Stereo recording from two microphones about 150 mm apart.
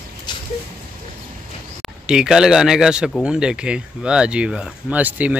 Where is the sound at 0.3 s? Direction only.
30° left (ahead or behind).